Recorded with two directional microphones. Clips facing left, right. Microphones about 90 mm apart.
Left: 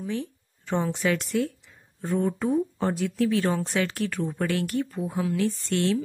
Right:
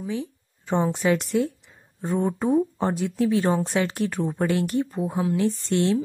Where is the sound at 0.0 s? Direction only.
10° right (ahead or behind).